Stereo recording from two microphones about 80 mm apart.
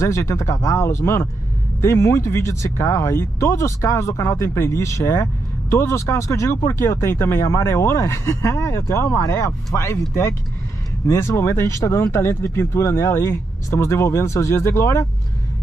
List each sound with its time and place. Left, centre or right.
0.0 s speech: left
11.1 s speech: left